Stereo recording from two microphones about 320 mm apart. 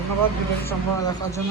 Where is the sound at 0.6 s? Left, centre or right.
Centre.